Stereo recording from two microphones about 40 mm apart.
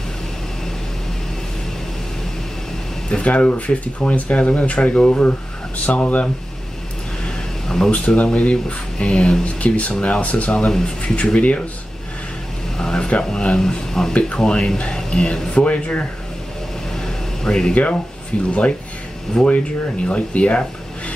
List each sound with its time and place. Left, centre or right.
3.1 s speech: left
7.2 s a sound: centre
8.2 s speech: left
9.9 s speech: left
10.2 s speech: left
12.7 s a sound: centre
13.2 s speech: left
16.9 s a sound: centre
18.5 s speech: left
19.4 s speech: centre
20.1 s speech: left